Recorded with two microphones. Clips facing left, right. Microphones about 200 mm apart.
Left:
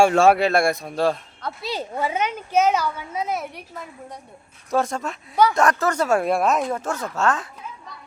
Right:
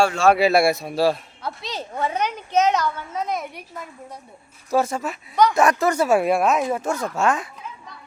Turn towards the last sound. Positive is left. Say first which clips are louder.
# right 1 dB
turn(degrees=-10)  # may be behind; listen again after turning